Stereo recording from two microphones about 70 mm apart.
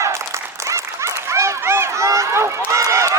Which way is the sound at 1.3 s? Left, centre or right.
Right.